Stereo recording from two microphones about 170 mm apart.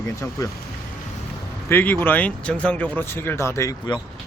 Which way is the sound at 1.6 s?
10° left (ahead or behind).